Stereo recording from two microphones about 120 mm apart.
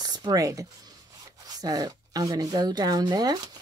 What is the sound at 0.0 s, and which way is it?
Speech, 35° right (ahead or behind).